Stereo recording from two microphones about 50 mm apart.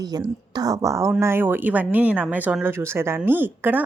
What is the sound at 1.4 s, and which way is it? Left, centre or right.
Speech, right.